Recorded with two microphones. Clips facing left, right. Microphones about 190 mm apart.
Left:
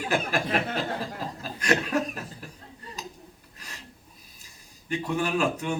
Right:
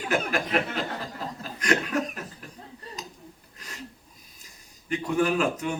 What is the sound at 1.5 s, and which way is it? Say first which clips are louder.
Chuckle: even; 35° left (ahead or behind).